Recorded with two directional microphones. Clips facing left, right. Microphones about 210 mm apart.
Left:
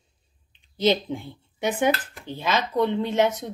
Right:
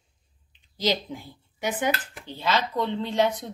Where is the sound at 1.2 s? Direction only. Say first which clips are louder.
Left 4 dB; 25° left (ahead or behind).